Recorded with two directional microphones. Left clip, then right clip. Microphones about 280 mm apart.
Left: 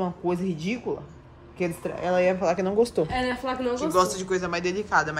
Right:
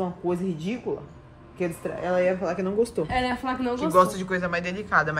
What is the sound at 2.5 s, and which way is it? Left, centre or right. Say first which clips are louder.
Speech: left 3 dB; left.